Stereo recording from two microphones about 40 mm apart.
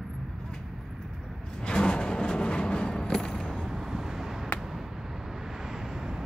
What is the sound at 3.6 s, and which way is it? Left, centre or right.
Vehicle, centre.